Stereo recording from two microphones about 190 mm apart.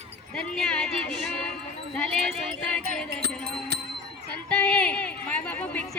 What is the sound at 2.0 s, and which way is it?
Speech, 5° left (ahead or behind).